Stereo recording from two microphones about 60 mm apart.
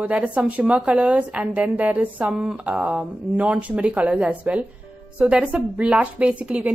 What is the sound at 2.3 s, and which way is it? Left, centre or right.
A woman's voice, centre.